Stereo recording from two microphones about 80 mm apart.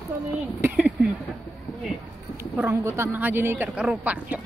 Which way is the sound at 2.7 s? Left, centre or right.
Right.